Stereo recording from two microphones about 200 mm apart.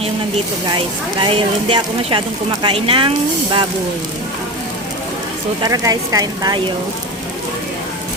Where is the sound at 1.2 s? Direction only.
25° right (ahead or behind).